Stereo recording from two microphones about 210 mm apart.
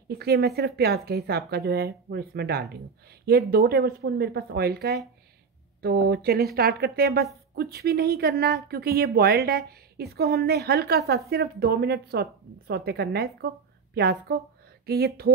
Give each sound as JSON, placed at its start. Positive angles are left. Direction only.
{"t": 0.1, "sound": "a woman's voice", "side_deg": -50}